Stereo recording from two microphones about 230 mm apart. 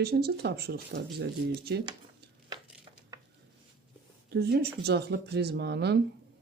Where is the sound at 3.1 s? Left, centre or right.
Centre.